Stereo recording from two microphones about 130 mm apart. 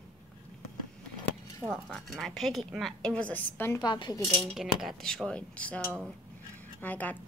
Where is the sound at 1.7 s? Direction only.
Centre (ahead or behind).